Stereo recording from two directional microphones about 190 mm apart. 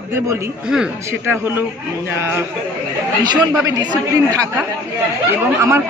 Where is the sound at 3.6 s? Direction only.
20° right (ahead or behind).